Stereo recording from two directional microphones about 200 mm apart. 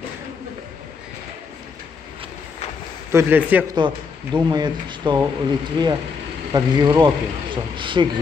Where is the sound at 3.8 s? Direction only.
25° right (ahead or behind).